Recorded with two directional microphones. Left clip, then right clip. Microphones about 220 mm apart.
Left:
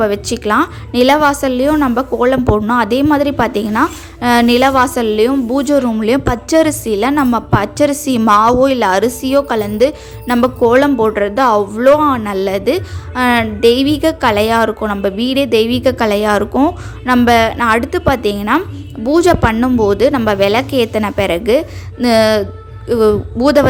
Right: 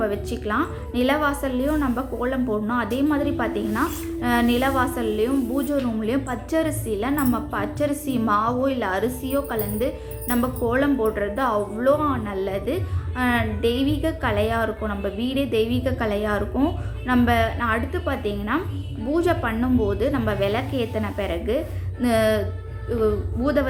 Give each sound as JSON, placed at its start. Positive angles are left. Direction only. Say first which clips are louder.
{"t": 0.0, "sound": "a woman's voice", "louder": "left 10 dB", "side_deg": 45}